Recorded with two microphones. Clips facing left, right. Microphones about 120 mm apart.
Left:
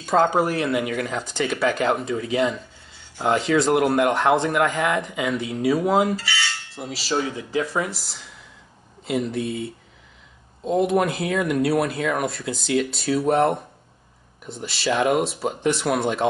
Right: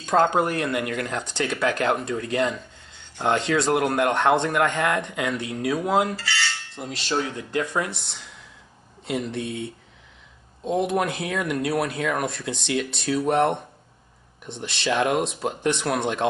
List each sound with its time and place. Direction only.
0.0 s speech: 5° left (ahead or behind)